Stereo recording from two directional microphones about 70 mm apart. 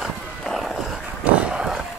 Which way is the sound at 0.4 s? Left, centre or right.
Centre.